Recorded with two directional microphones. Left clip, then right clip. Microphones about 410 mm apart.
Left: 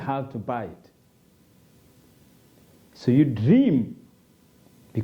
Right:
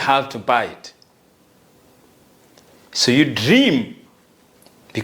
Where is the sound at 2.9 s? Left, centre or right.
Centre.